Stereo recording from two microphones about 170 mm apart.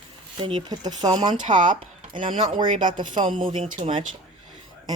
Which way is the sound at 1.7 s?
30° right (ahead or behind).